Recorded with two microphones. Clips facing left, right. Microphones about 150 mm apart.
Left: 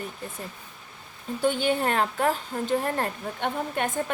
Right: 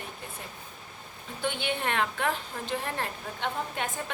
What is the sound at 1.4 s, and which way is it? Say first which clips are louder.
A woman's voice: left 7 dB; 40° left (ahead or behind).